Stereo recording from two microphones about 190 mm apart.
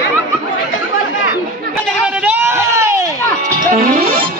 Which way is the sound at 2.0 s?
5° right (ahead or behind).